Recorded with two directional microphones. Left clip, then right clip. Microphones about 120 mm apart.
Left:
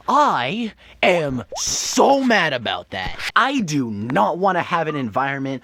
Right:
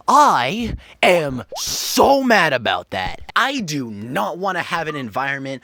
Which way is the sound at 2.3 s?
45° right (ahead or behind).